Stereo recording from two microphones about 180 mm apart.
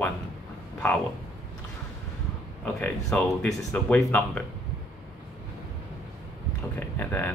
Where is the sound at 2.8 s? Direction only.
10° left (ahead or behind).